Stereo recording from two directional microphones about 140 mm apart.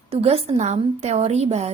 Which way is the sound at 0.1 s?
45° right (ahead or behind).